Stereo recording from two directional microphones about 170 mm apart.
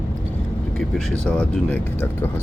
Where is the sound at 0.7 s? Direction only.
5° left (ahead or behind).